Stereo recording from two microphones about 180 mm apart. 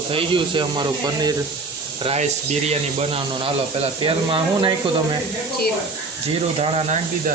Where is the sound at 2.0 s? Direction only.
35° right (ahead or behind).